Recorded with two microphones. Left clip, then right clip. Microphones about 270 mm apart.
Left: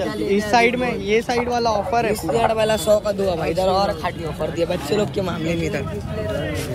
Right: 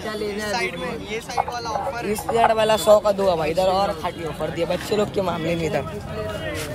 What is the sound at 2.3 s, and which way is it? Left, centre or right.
A man's voice, right.